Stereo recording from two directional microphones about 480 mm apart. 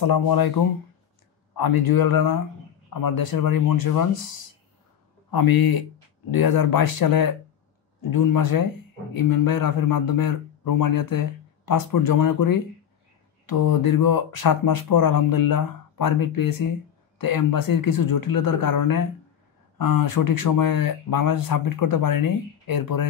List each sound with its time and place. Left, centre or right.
0.0 s a man's voice: left
1.6 s a man's voice: left
5.3 s a man's voice: left